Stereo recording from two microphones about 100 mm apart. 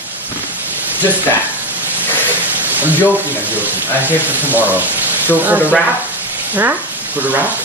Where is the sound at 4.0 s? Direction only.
20° right (ahead or behind).